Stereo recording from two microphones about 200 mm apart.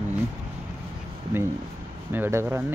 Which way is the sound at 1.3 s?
10° right (ahead or behind).